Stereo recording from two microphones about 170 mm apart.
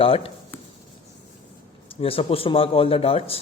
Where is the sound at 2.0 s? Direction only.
35° left (ahead or behind).